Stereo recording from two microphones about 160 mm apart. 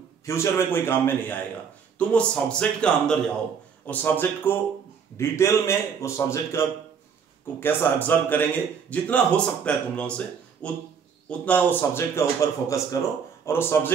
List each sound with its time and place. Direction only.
0.2 s speech: 15° left (ahead or behind)
7.6 s speech: 10° left (ahead or behind)